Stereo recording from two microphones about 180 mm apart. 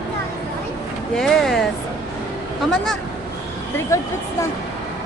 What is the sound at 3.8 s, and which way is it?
Speech, 15° left (ahead or behind).